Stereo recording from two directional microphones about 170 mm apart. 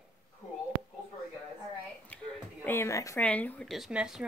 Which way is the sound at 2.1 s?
10° left (ahead or behind).